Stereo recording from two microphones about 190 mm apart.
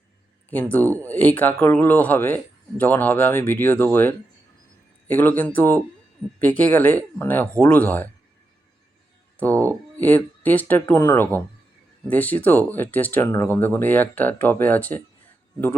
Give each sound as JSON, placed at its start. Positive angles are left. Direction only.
{"t": 0.5, "sound": "speech", "side_deg": 10}
{"t": 9.5, "sound": "speech", "side_deg": -15}
{"t": 10.0, "sound": "speech", "side_deg": 10}